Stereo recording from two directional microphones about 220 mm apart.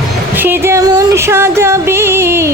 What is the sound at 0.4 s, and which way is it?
Music, 10° right (ahead or behind).